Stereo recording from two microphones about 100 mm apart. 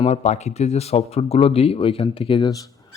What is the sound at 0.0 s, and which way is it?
Speech, 90° left.